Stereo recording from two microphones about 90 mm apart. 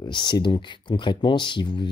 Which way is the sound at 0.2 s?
60° left (ahead or behind).